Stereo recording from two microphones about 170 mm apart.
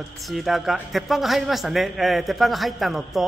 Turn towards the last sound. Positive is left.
turn(degrees=0)  # may be behind; listen again after turning